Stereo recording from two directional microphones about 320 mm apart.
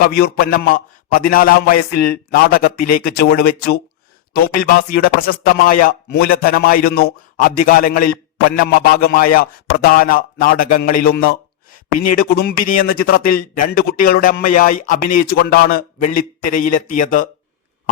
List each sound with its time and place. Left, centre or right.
0.2 s speech: left